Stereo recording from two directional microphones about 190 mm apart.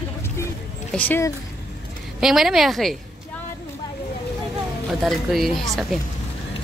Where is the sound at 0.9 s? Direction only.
10° left (ahead or behind).